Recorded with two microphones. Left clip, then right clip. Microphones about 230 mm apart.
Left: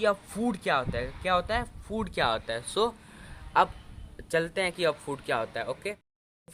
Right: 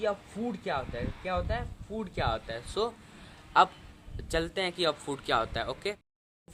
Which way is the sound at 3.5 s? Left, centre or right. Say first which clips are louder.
Right 1 dB; centre.